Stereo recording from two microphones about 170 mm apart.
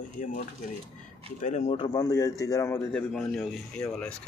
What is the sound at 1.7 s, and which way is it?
Speech, 25° left (ahead or behind).